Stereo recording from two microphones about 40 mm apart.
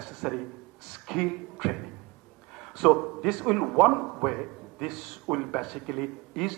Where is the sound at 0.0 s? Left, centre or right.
Centre.